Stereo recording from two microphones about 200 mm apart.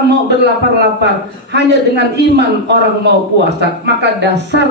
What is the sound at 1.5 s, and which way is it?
A man's voice, 60° right (ahead or behind).